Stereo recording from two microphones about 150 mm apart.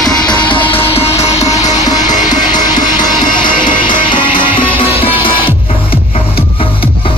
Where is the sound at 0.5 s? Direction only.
40° left (ahead or behind); by 2.9 s 60° left (ahead or behind).